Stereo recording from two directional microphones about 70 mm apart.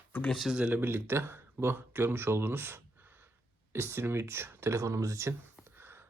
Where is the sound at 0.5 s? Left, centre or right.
Centre.